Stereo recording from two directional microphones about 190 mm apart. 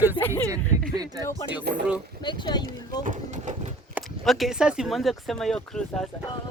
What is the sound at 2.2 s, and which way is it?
Speech, 25° left (ahead or behind).